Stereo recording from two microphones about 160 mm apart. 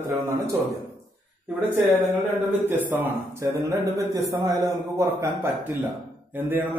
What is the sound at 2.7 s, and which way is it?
A man's voice, 10° right (ahead or behind).